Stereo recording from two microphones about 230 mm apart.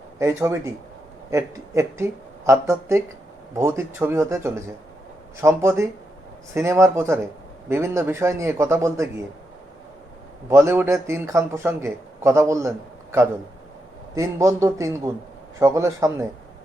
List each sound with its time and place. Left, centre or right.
0.2 s a man's voice: centre
10.5 s a man's voice: centre